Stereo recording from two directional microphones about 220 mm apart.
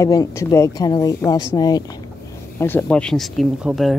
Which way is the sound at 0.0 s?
15° left (ahead or behind).